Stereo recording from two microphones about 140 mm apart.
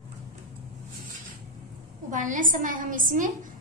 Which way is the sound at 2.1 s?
70° right (ahead or behind).